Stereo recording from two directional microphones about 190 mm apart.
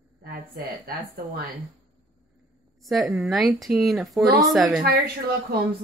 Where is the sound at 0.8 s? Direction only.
50° right (ahead or behind).